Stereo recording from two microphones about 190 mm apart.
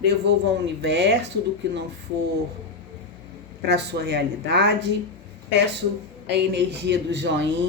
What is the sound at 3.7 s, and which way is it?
Speech, 60° right (ahead or behind).